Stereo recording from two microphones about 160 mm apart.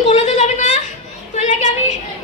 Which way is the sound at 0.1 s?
45° left (ahead or behind).